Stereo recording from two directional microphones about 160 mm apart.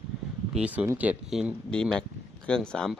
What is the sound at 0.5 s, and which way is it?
Speech, 10° right (ahead or behind).